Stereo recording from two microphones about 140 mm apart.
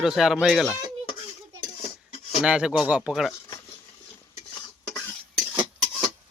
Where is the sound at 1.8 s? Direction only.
50° left (ahead or behind).